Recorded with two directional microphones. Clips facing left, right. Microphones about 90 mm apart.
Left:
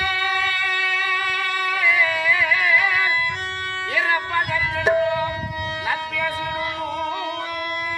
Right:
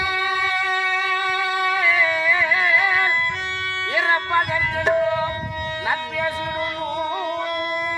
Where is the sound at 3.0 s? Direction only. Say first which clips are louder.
Right 1 dB; 5° left (ahead or behind).